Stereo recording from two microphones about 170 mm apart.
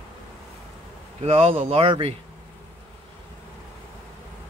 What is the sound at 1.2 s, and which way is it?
Speech, 35° right (ahead or behind).